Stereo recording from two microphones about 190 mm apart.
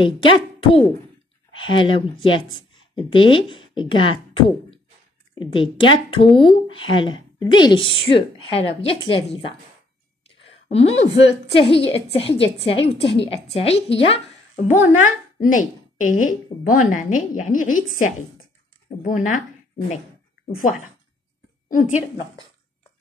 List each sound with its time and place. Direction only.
0.0 s speech: 25° left (ahead or behind)
10.7 s a woman's voice: 35° left (ahead or behind)
15.4 s a woman's voice: 45° left (ahead or behind)
21.6 s a woman's voice: 45° left (ahead or behind)